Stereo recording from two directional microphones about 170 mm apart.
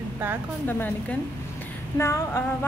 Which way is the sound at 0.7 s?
10° left (ahead or behind).